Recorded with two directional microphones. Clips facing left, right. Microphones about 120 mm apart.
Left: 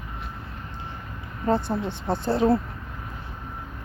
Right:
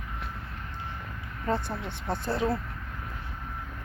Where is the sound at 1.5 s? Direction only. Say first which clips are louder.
Left 6 dB; 30° left (ahead or behind).